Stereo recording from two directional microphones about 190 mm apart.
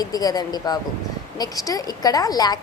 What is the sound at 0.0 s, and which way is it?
Speech, 20° left (ahead or behind).